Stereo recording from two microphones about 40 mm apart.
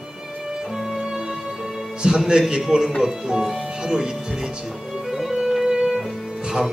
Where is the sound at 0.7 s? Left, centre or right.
Centre.